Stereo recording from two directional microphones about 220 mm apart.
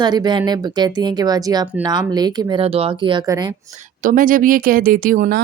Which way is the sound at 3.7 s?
35° right (ahead or behind).